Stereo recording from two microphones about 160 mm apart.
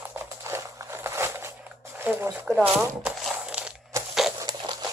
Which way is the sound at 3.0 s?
5° right (ahead or behind).